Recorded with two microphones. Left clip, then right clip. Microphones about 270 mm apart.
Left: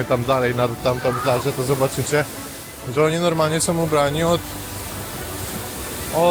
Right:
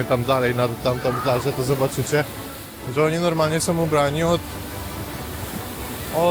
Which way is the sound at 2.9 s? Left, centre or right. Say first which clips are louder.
Left 2 dB; centre.